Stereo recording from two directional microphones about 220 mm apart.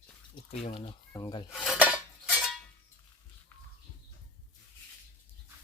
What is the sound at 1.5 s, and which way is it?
Dishes, 5° right (ahead or behind).